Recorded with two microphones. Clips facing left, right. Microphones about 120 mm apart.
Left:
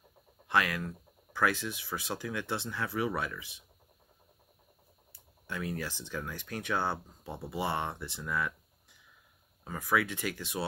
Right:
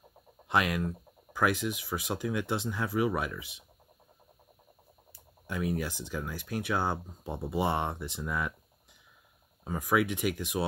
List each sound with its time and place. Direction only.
0.5 s speech: 20° right (ahead or behind)
5.5 s speech: 15° right (ahead or behind)
9.7 s speech: 15° right (ahead or behind)